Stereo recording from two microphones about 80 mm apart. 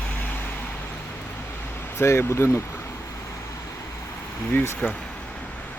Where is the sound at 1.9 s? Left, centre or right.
Left.